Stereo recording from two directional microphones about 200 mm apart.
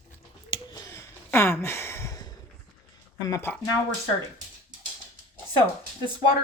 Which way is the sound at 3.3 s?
15° left (ahead or behind).